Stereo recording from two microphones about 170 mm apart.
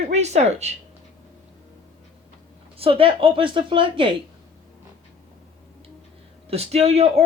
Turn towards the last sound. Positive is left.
turn(degrees=-35)  # may be behind; listen again after turning